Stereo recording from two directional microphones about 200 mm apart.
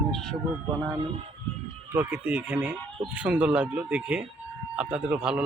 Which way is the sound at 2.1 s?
5° right (ahead or behind).